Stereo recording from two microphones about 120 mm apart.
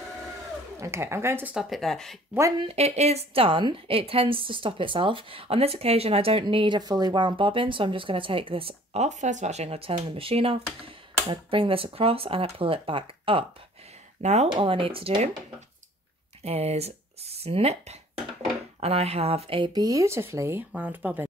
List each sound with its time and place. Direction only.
0.7 s speech: 25° right (ahead or behind)
1.5 s speech: centre (ahead or behind)
2.6 s a woman's voice: 60° right (ahead or behind)
6.4 s a woman's voice: 40° right (ahead or behind)
9.0 s a woman's voice: 90° right; by 13.5 s 50° right (ahead or behind)
14.2 s speech: 65° right (ahead or behind)
14.5 s a woman's voice: 50° right (ahead or behind)
16.4 s speech: 60° right (ahead or behind)
19.7 s speech: 30° right (ahead or behind); by 21.3 s 15° right (ahead or behind)